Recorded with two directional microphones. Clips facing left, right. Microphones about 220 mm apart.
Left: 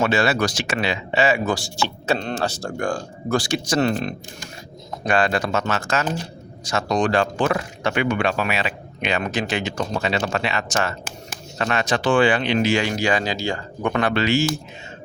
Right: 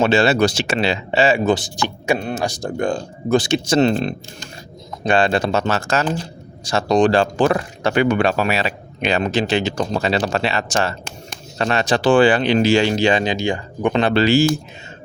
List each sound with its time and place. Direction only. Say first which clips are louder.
0.0 s speech: right 5 dB; 25° right (ahead or behind)